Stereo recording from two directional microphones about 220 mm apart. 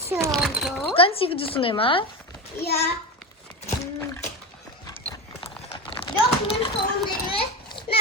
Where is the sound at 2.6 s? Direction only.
45° left (ahead or behind).